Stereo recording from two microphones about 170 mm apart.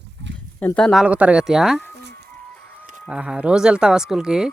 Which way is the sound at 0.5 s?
5° left (ahead or behind).